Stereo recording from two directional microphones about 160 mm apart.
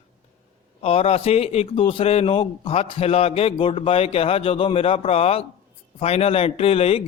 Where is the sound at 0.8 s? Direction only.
40° left (ahead or behind).